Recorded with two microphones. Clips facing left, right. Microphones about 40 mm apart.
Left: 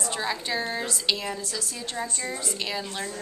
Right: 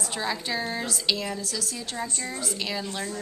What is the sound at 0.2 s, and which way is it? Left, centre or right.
A woman's voice, centre.